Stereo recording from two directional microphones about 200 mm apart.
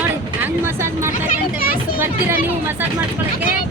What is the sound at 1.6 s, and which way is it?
Speech, 45° left (ahead or behind).